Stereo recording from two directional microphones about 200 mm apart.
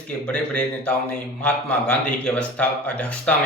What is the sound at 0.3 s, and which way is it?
A man's voice, 5° left (ahead or behind).